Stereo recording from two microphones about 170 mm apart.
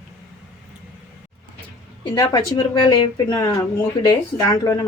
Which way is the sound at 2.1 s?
20° left (ahead or behind).